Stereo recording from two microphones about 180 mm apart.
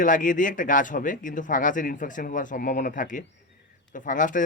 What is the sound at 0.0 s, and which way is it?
Speech, 45° left (ahead or behind).